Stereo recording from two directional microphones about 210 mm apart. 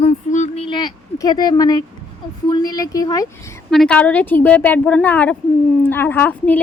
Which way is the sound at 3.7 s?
5° left (ahead or behind).